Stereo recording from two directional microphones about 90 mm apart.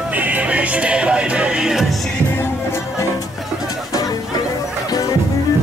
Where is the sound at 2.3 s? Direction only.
30° left (ahead or behind).